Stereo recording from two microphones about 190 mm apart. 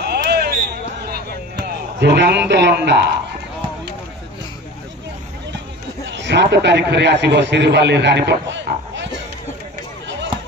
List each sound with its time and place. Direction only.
0.0 s a sound: 60° right (ahead or behind)
2.0 s a man's voice: 65° right (ahead or behind)
6.0 s a man's voice: 65° right (ahead or behind)